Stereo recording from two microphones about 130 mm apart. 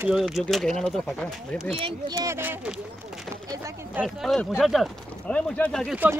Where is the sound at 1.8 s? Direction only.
40° right (ahead or behind).